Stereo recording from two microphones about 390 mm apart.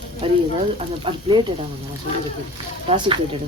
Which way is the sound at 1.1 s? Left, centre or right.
Centre.